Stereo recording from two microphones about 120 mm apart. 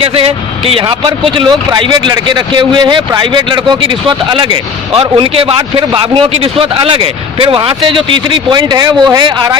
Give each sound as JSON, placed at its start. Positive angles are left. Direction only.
{"t": 0.0, "sound": "a man's voice", "side_deg": -55}
{"t": 4.9, "sound": "a man's voice", "side_deg": -50}